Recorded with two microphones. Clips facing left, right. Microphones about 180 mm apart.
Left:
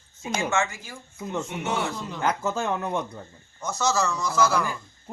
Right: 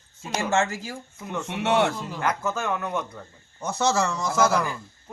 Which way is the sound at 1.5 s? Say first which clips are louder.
Right 10 dB; 75° right (ahead or behind).